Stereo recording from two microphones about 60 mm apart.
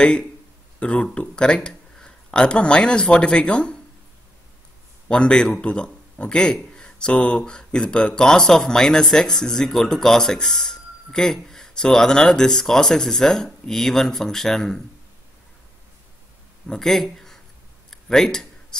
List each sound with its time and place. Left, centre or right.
0.0 s a man's voice: centre
5.0 s a man's voice: centre
16.6 s speech: centre
17.8 s a sound: centre